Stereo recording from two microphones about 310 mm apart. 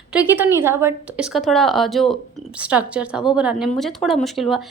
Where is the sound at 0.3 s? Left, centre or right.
Centre.